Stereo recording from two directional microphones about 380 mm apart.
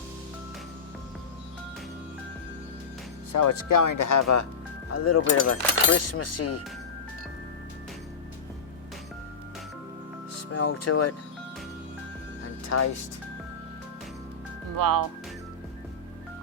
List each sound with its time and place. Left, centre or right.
3.3 s speech: left
10.5 s speech: left
12.6 s speech: left
14.8 s speech: right